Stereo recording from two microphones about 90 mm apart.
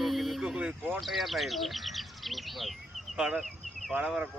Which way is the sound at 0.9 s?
Centre (ahead or behind).